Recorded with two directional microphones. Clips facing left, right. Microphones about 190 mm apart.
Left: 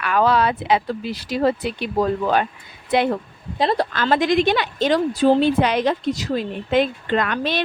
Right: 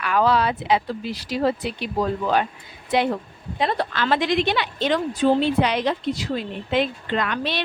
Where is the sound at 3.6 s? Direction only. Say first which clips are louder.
Left 3 dB; 35° left (ahead or behind).